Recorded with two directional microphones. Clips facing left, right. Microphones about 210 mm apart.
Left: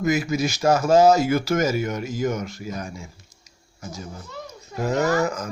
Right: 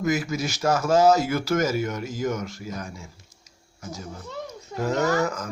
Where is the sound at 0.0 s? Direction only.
15° left (ahead or behind).